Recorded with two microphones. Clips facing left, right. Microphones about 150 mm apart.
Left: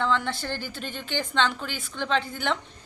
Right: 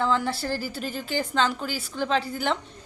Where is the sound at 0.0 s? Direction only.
5° right (ahead or behind).